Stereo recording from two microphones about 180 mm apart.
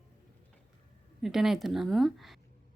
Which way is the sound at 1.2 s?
Centre (ahead or behind).